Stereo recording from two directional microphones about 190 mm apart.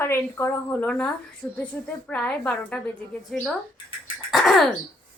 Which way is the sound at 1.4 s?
15° left (ahead or behind).